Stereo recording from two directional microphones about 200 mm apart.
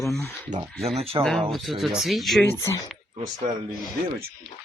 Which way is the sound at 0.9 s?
30° right (ahead or behind).